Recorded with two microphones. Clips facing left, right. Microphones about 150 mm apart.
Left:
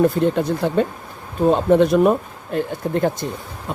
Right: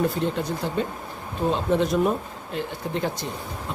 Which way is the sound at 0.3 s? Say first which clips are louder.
Left 7 dB; 60° left (ahead or behind).